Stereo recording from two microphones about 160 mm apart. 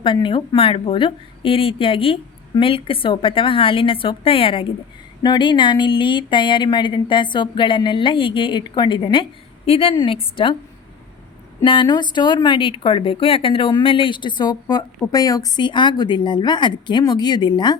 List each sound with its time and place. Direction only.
0.0 s speech: 30° left (ahead or behind)
11.6 s speech: 30° left (ahead or behind)